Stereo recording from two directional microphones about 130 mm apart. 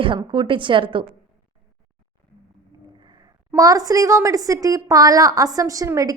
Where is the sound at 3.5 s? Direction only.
25° right (ahead or behind).